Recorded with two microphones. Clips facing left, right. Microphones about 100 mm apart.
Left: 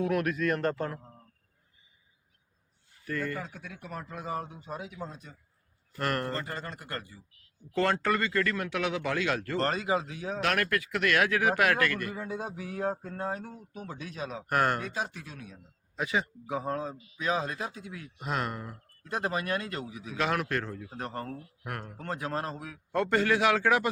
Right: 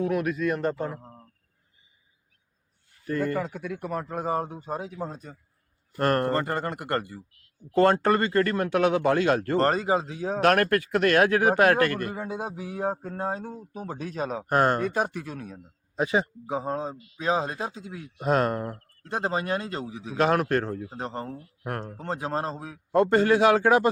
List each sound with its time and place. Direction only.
0.1 s speech: 5° right (ahead or behind)
3.0 s speech: 35° right (ahead or behind)
6.3 s speech: 60° right (ahead or behind)
7.8 s speech: 40° right (ahead or behind)
14.5 s a man's voice: 30° right (ahead or behind)
14.8 s speech: 50° right (ahead or behind)
16.0 s a man's voice: 35° right (ahead or behind)
18.2 s speech: 40° right (ahead or behind)
19.0 s a man's voice: 25° right (ahead or behind)
20.9 s a man's voice: 20° right (ahead or behind)
21.6 s a man's voice: 35° right (ahead or behind)